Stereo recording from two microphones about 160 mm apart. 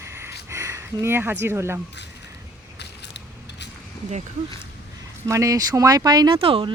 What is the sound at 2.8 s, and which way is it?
Biting, 90° left.